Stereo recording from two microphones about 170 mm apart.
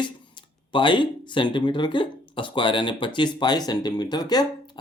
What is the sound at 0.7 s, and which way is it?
Speech, 30° left (ahead or behind).